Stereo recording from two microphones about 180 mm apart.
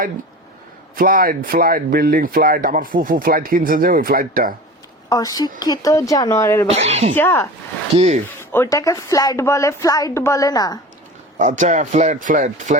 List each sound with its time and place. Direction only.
0.9 s speech: 50° right (ahead or behind)
5.0 s speech: 20° left (ahead or behind)
6.7 s speech: 35° right (ahead or behind)
7.2 s a woman's voice: 15° left (ahead or behind)
7.9 s speech: 40° right (ahead or behind)
8.4 s a woman's voice: 15° left (ahead or behind)
11.3 s speech: 45° right (ahead or behind)